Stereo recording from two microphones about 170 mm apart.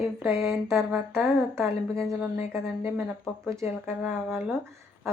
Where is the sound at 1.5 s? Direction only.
15° right (ahead or behind).